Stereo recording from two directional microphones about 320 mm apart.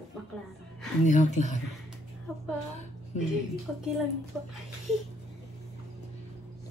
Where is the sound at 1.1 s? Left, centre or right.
Left.